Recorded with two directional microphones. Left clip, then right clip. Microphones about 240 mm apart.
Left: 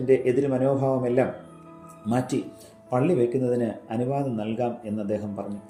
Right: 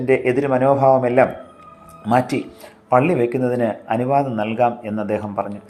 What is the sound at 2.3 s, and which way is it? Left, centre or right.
Speech, right.